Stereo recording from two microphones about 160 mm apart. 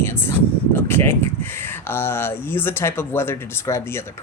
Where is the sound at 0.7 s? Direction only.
15° left (ahead or behind).